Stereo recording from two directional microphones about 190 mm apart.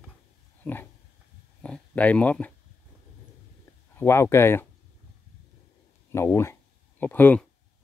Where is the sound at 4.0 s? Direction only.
15° left (ahead or behind).